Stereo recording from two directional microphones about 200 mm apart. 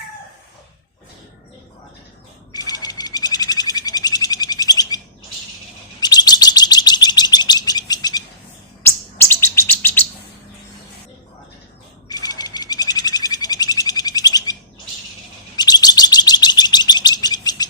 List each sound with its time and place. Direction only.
2.5 s bird: 20° left (ahead or behind)
6.0 s chirp: 20° left (ahead or behind)
12.0 s bird: 20° left (ahead or behind)
15.5 s chirp: 20° left (ahead or behind)